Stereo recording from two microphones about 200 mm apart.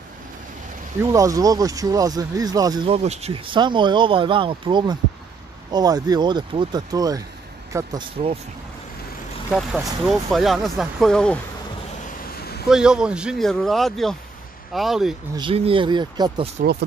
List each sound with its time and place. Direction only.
1.1 s speech: 15° right (ahead or behind)
9.5 s speech: centre (ahead or behind)
12.4 s a sound: 50° left (ahead or behind)
12.6 s speech: 5° right (ahead or behind)
15.3 s speech: 25° right (ahead or behind)